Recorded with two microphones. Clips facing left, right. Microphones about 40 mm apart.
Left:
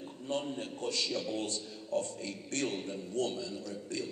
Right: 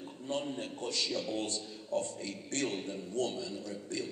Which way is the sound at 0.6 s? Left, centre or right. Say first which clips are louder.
Left 1 dB; right.